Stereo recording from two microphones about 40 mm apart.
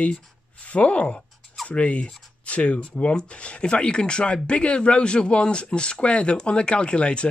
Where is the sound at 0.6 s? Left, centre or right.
Left.